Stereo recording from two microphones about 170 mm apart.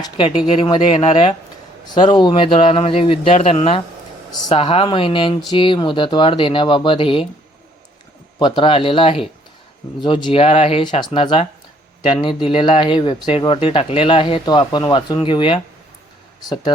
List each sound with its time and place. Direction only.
0.0 s speech: 30° left (ahead or behind); by 4.6 s 45° left (ahead or behind)
4.6 s speech: 30° left (ahead or behind)
8.4 s speech: 25° left (ahead or behind)